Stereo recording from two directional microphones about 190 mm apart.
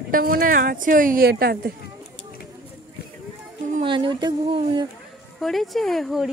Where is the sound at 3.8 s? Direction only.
25° right (ahead or behind).